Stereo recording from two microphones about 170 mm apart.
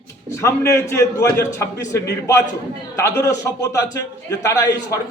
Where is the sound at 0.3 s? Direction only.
15° left (ahead or behind).